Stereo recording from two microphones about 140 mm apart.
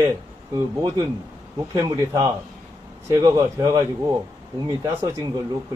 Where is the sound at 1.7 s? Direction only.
25° right (ahead or behind).